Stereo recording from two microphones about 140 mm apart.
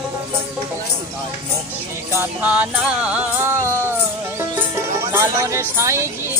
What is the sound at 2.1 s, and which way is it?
Music, 15° right (ahead or behind).